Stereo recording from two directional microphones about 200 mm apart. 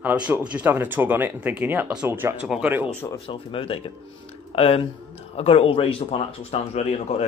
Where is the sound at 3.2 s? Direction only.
25° left (ahead or behind).